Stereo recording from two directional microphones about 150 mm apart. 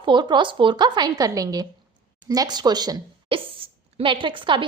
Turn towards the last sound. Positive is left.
turn(degrees=-35)  # may be behind; listen again after turning